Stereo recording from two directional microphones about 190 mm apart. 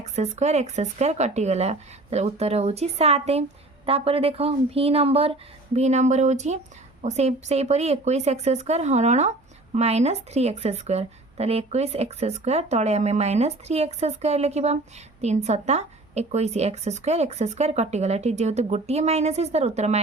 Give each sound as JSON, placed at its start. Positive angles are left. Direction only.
{"t": 0.0, "sound": "speech", "side_deg": -35}